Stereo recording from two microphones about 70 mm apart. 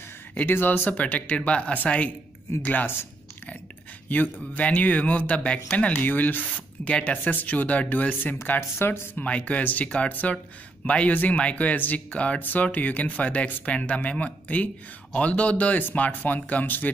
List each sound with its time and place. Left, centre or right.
0.3 s speech: left
4.1 s speech: left
9.1 s speech: centre